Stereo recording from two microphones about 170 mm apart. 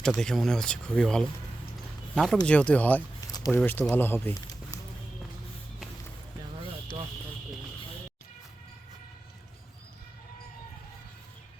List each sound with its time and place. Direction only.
0.0 s speech: 5° left (ahead or behind)
3.2 s a sound: 20° left (ahead or behind)
3.6 s speech: 10° left (ahead or behind)